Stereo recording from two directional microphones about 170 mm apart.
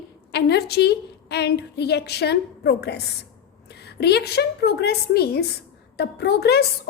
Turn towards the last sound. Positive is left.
turn(degrees=70)  # may be behind; listen again after turning